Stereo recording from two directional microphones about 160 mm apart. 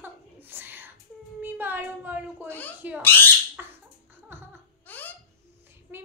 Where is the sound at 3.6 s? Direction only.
10° right (ahead or behind).